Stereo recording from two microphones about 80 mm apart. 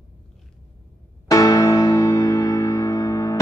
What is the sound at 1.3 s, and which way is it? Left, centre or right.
Music, left.